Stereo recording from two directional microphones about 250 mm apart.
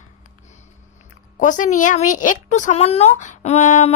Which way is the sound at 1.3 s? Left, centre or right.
Left.